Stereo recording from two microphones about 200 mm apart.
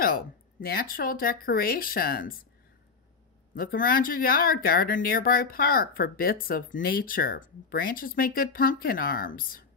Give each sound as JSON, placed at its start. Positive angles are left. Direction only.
{"t": 0.0, "sound": "speech", "side_deg": 45}
{"t": 3.5, "sound": "speech", "side_deg": 45}